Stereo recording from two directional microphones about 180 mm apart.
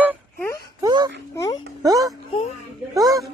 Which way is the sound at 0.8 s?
20° right (ahead or behind).